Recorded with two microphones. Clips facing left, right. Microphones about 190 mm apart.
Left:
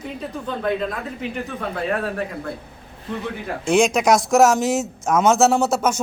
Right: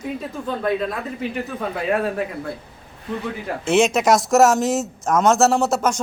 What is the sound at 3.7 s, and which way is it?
A man's voice, 5° right (ahead or behind).